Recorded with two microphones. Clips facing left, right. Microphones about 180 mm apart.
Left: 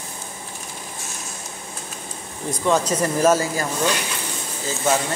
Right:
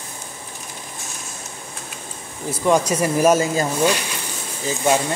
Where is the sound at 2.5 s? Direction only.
10° right (ahead or behind).